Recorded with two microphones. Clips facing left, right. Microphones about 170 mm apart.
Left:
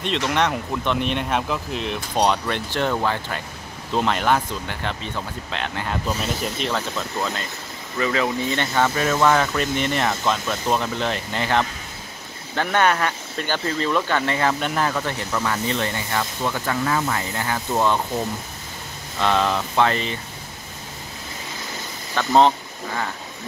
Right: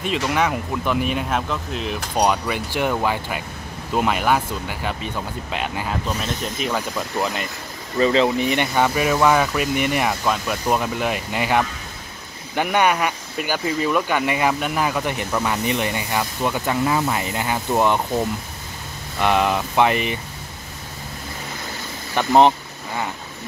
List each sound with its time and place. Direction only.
0.0 s speech: 5° right (ahead or behind)
6.2 s speech: 5° left (ahead or behind)
6.7 s speech: 15° right (ahead or behind)
19.1 s speech: 15° right (ahead or behind)
22.1 s speech: 15° right (ahead or behind)